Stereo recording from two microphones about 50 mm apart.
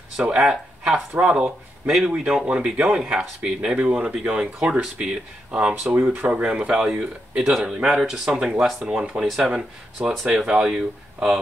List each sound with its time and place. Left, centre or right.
0.2 s speech: centre
5.9 s speech: right
8.0 s speech: centre
10.2 s speech: centre